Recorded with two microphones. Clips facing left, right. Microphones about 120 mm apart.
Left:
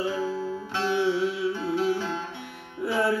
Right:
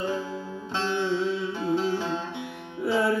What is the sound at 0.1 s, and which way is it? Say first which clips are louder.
Music: left 3 dB; 20° right (ahead or behind).